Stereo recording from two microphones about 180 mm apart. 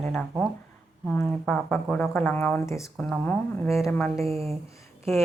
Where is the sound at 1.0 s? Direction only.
5° left (ahead or behind).